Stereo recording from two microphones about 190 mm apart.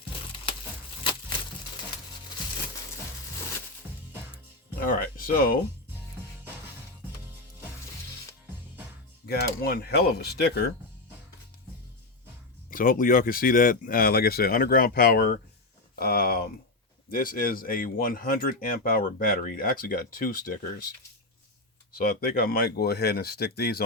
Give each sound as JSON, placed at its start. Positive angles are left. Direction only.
{"t": 3.9, "sound": "music", "side_deg": -10}
{"t": 4.7, "sound": "music", "side_deg": 45}
{"t": 9.2, "sound": "speech", "side_deg": 55}
{"t": 12.7, "sound": "speech", "side_deg": 50}
{"t": 21.9, "sound": "speech", "side_deg": 50}